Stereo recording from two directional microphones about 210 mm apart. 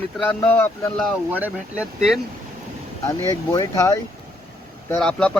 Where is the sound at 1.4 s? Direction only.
5° right (ahead or behind).